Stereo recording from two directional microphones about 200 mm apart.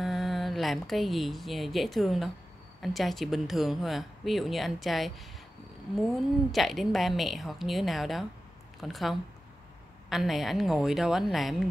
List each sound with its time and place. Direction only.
0.0 s a woman's voice: centre (ahead or behind)